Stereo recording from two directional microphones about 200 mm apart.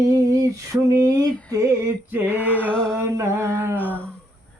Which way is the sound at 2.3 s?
10° left (ahead or behind).